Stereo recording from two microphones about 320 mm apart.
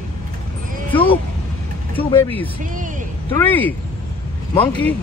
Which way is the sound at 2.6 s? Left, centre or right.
Right.